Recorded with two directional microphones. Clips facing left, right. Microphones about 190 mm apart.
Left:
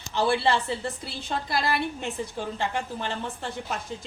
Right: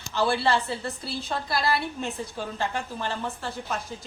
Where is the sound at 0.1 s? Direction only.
20° left (ahead or behind).